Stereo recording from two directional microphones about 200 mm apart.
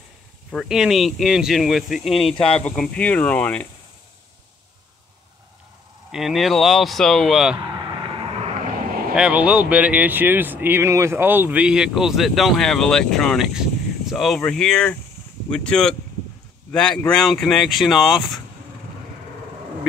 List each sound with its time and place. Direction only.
0.5 s speech: centre (ahead or behind)
6.1 s speech: centre (ahead or behind)
8.0 s vehicle: 30° right (ahead or behind)
9.1 s speech: 5° right (ahead or behind)